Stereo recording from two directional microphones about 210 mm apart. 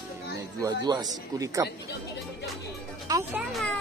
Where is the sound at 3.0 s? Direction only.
15° right (ahead or behind).